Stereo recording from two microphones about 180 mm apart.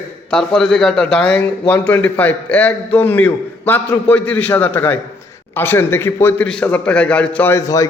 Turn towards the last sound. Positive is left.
turn(degrees=20)  # may be behind; listen again after turning